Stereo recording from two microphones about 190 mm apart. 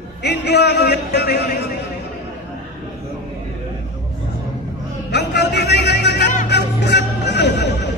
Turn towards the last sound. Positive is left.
turn(degrees=60)  # may be behind; listen again after turning